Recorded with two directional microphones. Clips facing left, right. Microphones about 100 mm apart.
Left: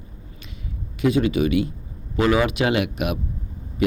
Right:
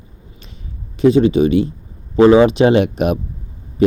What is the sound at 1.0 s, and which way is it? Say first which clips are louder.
Speech: right 8 dB; 30° right (ahead or behind).